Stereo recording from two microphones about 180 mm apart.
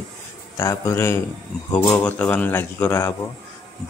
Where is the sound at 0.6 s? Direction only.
15° left (ahead or behind).